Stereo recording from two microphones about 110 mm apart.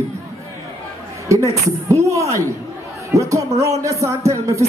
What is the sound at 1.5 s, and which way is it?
Speech, 25° right (ahead or behind).